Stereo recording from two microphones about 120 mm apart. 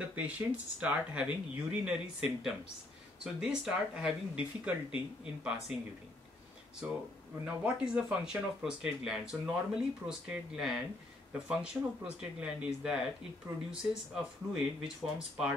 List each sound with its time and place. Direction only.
0.1 s speech: 10° right (ahead or behind)
6.8 s speech: 10° right (ahead or behind)